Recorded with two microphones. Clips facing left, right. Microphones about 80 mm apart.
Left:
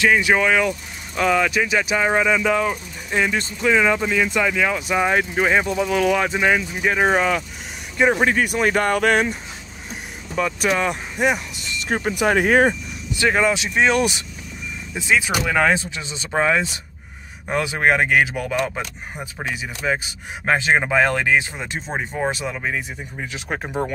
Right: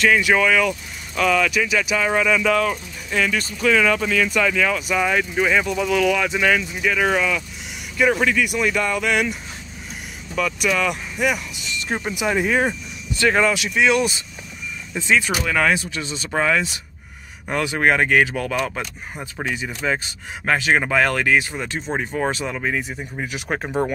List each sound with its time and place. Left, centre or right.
0.0 s speech: centre
4.8 s speech: left
6.4 s speech: left
8.0 s speech: left
11.9 s speech: left
13.5 s speech: left
15.0 s speech: centre
21.8 s speech: centre